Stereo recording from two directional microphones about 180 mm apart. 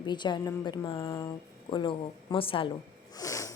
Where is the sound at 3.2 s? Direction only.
20° left (ahead or behind).